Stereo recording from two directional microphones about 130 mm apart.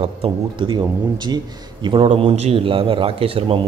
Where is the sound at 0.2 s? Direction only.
40° right (ahead or behind).